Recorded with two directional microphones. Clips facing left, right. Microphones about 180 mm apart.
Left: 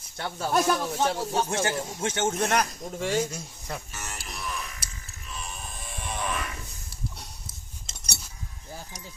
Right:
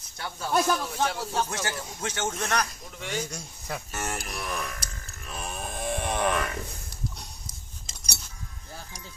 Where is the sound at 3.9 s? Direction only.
55° right (ahead or behind).